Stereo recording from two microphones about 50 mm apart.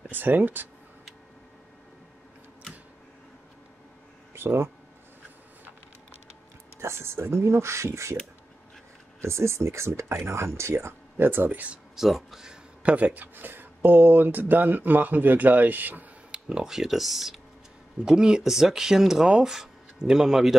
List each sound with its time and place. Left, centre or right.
0.1 s speech: right
4.4 s speech: right
6.8 s speech: right
9.2 s speech: right
11.1 s speech: right
11.9 s speech: centre
12.8 s speech: right
16.3 s tick: centre
16.7 s speech: centre